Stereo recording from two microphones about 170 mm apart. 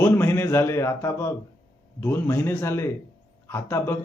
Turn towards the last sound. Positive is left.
turn(degrees=15)  # may be behind; listen again after turning